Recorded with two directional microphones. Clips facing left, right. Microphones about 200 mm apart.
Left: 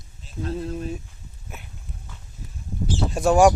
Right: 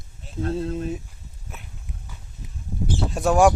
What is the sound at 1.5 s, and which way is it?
Dog, centre (ahead or behind).